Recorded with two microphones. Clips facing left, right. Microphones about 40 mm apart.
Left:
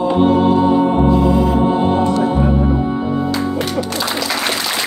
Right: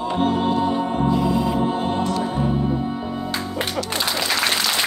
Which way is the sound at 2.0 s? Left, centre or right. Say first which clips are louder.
Left 7 dB; left.